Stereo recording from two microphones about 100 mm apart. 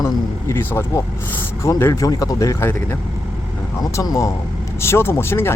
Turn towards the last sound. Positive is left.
turn(degrees=25)  # may be behind; listen again after turning